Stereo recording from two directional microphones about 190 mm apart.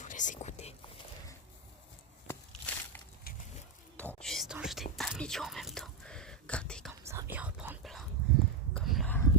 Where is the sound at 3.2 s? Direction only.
50° left (ahead or behind).